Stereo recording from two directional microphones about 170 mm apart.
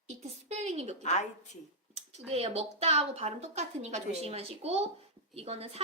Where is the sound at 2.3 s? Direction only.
35° right (ahead or behind).